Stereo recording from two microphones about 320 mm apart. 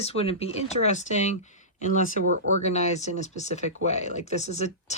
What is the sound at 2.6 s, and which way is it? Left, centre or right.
Speech, left.